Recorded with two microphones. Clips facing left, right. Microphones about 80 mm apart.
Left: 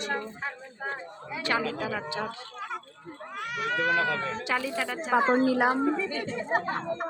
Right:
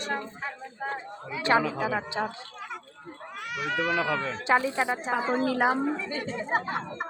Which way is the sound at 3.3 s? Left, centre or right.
Left.